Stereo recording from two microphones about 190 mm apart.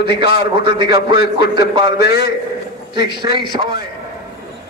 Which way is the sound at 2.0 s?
60° left (ahead or behind).